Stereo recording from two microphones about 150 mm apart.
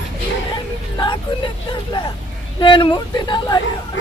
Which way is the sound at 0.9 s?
30° left (ahead or behind).